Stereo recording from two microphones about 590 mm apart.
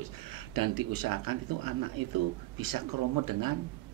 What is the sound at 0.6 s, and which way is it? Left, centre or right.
Speech, right.